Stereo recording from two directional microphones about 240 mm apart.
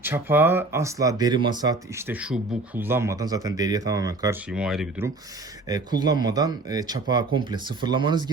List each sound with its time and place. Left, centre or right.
0.0 s speech: centre
5.6 s speech: centre